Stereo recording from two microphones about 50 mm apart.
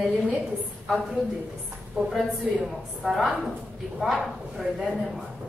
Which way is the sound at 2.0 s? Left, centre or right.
Right.